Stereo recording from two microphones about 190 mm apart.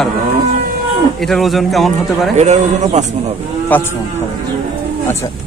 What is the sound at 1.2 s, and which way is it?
Speech, centre (ahead or behind).